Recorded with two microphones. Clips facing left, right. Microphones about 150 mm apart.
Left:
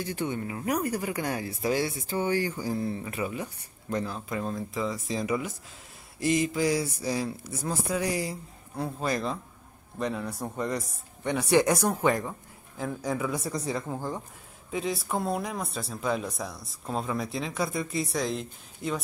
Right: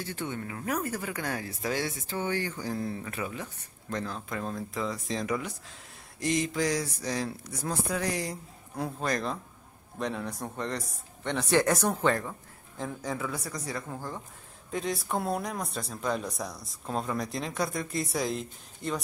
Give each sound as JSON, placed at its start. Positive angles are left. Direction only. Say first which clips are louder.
{"t": 0.0, "sound": "speech", "louder": "left 4 dB", "side_deg": 15}
{"t": 14.7, "sound": "speech", "louder": "left 1 dB", "side_deg": 5}